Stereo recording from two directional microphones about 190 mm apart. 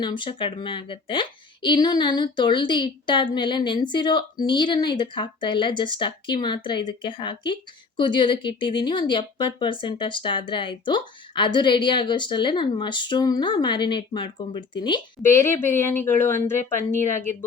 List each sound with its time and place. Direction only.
0.0 s a woman's voice: 25° left (ahead or behind)
15.2 s speech: 15° left (ahead or behind)